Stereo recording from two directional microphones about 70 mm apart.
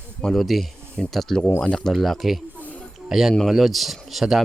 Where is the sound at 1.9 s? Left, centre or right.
Centre.